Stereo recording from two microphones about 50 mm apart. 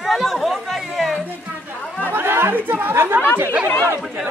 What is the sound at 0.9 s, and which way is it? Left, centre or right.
Music, centre.